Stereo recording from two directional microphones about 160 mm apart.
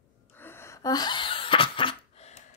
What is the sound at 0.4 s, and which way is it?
Gasp, 15° left (ahead or behind).